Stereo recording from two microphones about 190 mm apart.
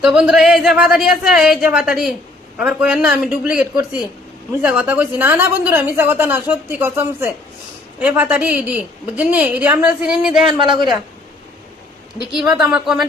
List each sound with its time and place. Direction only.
0.0 s a woman's voice: 5° right (ahead or behind)
10.4 s speech: 25° right (ahead or behind)
12.3 s a woman's voice: centre (ahead or behind)